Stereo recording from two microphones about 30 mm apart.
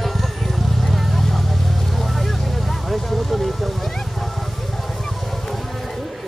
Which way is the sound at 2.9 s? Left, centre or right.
Centre.